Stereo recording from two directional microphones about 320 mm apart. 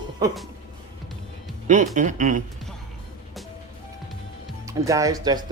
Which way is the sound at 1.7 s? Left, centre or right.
Right.